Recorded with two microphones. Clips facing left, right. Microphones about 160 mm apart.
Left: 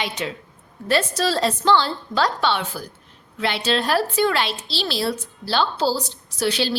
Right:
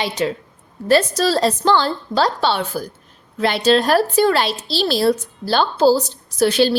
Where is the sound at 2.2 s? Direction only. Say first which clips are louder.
Right 2 dB; 35° right (ahead or behind).